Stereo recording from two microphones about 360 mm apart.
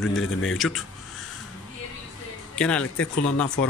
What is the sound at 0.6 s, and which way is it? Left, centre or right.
Speech, centre.